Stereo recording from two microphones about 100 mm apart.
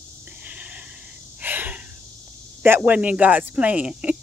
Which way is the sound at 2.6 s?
15° right (ahead or behind).